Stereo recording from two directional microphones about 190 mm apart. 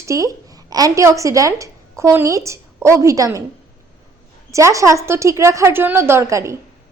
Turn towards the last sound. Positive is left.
turn(degrees=-15)  # may be behind; listen again after turning